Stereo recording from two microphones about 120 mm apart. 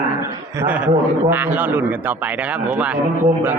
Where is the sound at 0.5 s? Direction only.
20° right (ahead or behind).